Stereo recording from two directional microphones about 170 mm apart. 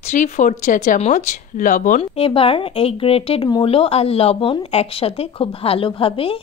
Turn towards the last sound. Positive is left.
turn(degrees=35)  # may be behind; listen again after turning